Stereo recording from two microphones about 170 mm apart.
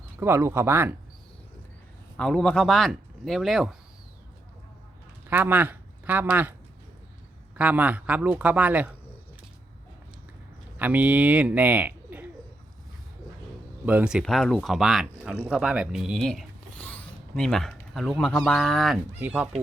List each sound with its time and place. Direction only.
0.2 s speech: 15° right (ahead or behind)
2.1 s speech: 5° left (ahead or behind)
5.3 s speech: 10° right (ahead or behind)
7.5 s speech: 10° right (ahead or behind)
10.8 s speech: 10° right (ahead or behind)
13.8 s speech: 5° right (ahead or behind)